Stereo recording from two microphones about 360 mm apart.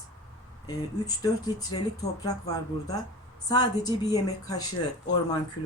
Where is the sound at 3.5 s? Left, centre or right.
Centre.